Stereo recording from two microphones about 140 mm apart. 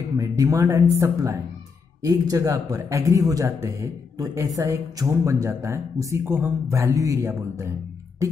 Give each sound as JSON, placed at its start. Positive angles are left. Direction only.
{"t": 0.2, "sound": "speech", "side_deg": -25}
{"t": 8.2, "sound": "music", "side_deg": -20}